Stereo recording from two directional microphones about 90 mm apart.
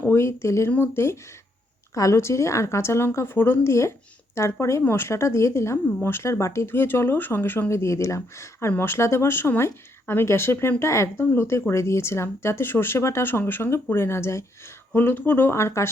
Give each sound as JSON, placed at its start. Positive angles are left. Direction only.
{"t": 0.0, "sound": "a woman's voice", "side_deg": 30}